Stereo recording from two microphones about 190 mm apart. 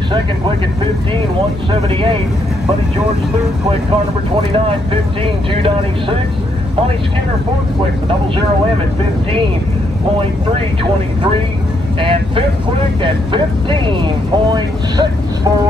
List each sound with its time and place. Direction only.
5.2 s speech: 25° right (ahead or behind)
12.0 s speech: 25° right (ahead or behind)